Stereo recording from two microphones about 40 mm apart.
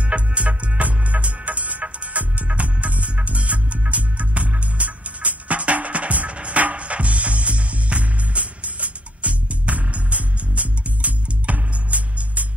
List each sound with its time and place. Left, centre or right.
0.0 s music: right